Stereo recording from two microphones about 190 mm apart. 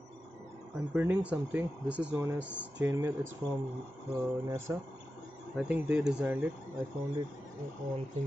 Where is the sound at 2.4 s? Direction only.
70° right (ahead or behind).